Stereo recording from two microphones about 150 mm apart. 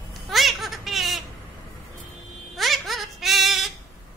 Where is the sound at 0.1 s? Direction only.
Centre (ahead or behind).